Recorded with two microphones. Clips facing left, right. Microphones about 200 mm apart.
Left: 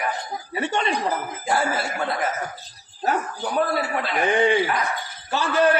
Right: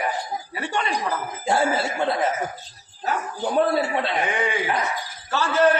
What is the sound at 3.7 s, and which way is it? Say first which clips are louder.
Speech: right 3 dB; 25° right (ahead or behind).